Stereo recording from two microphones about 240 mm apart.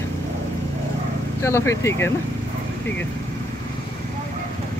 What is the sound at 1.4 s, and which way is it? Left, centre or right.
Speech, centre.